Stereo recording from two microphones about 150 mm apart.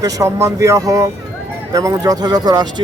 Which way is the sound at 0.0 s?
20° right (ahead or behind).